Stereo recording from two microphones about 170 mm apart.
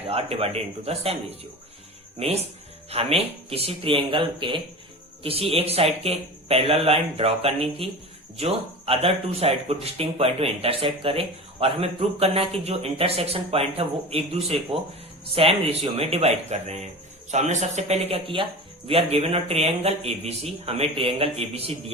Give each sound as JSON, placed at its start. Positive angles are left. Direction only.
{"t": 0.0, "sound": "speech", "side_deg": -35}